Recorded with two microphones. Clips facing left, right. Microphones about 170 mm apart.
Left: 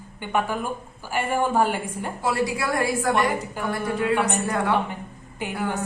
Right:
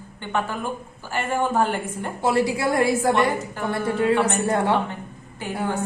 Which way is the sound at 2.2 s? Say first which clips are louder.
Right 4 dB; 25° right (ahead or behind).